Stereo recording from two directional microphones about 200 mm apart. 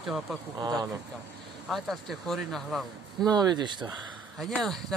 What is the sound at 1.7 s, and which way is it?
Speech, centre (ahead or behind).